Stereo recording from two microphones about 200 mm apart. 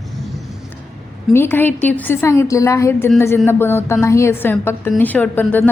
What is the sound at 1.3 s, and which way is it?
A woman's voice, 10° left (ahead or behind).